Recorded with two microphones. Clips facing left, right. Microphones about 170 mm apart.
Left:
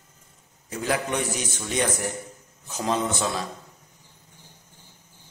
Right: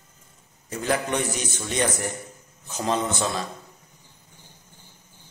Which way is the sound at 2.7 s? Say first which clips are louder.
Even; 5° left (ahead or behind).